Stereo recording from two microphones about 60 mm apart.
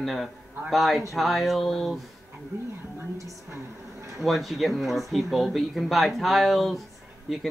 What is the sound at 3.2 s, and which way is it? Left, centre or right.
Speech, right.